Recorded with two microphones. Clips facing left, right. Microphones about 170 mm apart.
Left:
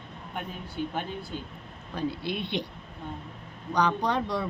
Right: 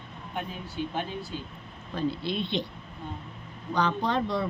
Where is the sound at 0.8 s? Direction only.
50° left (ahead or behind).